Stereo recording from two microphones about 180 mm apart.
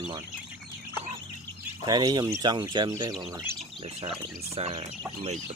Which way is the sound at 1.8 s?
25° right (ahead or behind).